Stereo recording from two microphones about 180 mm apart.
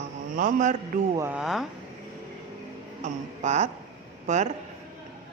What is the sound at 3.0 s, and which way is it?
Speech, 40° right (ahead or behind).